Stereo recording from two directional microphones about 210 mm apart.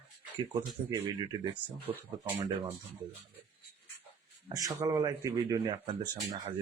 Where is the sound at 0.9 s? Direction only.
20° right (ahead or behind).